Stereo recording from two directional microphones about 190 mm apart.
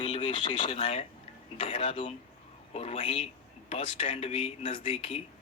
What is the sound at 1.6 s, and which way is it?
A man's voice, 30° left (ahead or behind).